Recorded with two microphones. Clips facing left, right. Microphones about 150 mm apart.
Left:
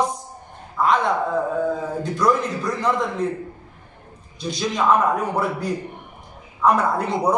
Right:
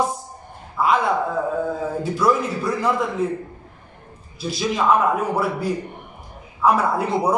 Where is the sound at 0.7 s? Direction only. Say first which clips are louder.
Even; 5° right (ahead or behind).